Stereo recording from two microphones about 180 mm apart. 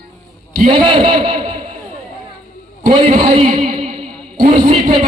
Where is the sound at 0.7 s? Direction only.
25° right (ahead or behind).